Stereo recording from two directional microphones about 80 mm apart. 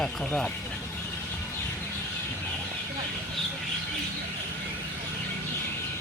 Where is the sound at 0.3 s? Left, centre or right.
Centre.